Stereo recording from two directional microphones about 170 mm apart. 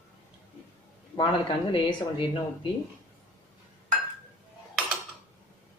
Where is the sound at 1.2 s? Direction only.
30° left (ahead or behind).